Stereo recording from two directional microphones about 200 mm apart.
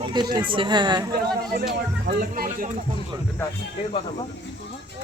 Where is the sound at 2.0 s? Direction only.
50° right (ahead or behind).